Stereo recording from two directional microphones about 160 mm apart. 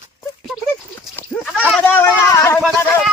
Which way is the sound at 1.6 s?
10° left (ahead or behind).